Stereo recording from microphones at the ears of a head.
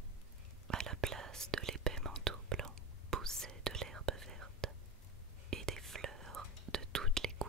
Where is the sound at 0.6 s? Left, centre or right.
Right.